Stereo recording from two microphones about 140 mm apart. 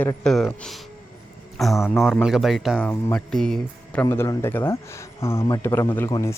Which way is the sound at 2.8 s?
15° left (ahead or behind).